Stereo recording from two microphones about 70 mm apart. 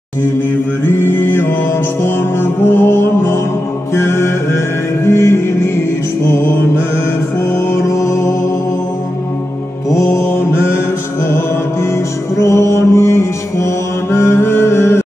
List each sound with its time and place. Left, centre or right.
0.8 s mantra: left
2.0 s music: left
3.9 s mantra: left
5.0 s music: left
7.5 s mantra: left
9.8 s mantra: left
11.2 s music: left
12.4 s mantra: left
14.1 s music: left